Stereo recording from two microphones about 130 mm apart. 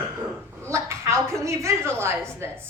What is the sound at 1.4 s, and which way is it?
A woman's voice, 25° right (ahead or behind).